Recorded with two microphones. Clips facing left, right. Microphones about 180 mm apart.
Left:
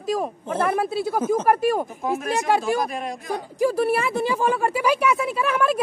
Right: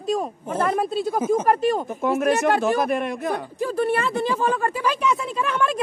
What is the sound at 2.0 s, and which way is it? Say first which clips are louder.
A man's voice: right 5 dB; 60° right (ahead or behind).